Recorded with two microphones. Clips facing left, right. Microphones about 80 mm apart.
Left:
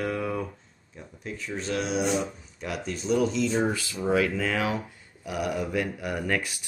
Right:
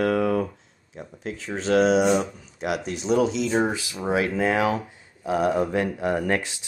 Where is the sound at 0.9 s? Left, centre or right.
Right.